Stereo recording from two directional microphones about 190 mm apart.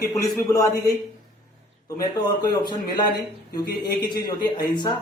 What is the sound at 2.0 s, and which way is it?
Speech, 20° left (ahead or behind).